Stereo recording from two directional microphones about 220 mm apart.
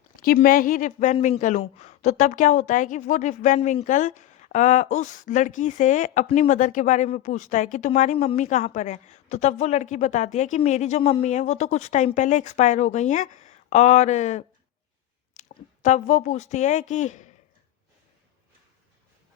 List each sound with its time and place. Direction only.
0.2 s a woman's voice: 40° left (ahead or behind)